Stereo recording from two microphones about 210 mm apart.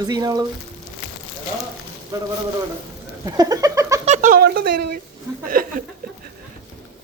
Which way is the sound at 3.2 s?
20° right (ahead or behind).